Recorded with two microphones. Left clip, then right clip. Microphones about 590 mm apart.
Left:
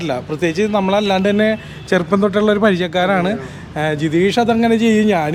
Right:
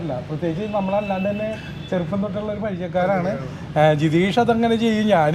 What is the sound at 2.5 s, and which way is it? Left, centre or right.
Speech, left.